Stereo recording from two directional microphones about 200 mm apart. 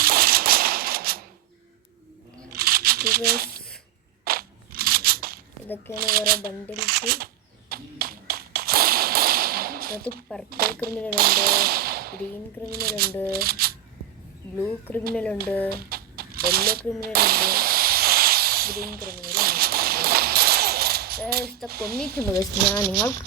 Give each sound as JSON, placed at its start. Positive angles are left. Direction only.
{"t": 0.0, "sound": "a sound", "side_deg": -50}
{"t": 2.5, "sound": "a sound", "side_deg": -50}
{"t": 4.2, "sound": "crunch", "side_deg": -50}
{"t": 6.0, "sound": "speech", "side_deg": -50}
{"t": 7.7, "sound": "whip", "side_deg": -50}
{"t": 10.5, "sound": "speech", "side_deg": -50}
{"t": 14.6, "sound": "speech", "side_deg": 10}
{"t": 15.7, "sound": "a sound", "side_deg": -50}
{"t": 21.7, "sound": "speech", "side_deg": -50}
{"t": 22.4, "sound": "speech", "side_deg": 10}